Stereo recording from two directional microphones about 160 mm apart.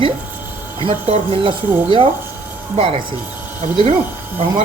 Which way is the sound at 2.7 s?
40° right (ahead or behind).